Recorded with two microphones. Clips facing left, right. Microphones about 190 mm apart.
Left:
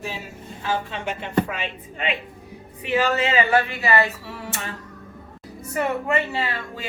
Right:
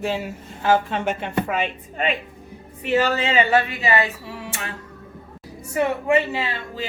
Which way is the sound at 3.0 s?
30° right (ahead or behind).